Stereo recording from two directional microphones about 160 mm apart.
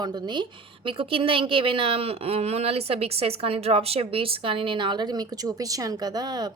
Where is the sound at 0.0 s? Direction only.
25° right (ahead or behind).